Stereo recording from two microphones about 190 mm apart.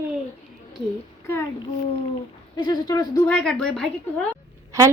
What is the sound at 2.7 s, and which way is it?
Speech, 20° left (ahead or behind).